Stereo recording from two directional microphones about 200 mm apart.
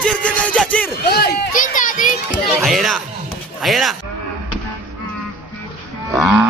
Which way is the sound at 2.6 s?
Centre (ahead or behind).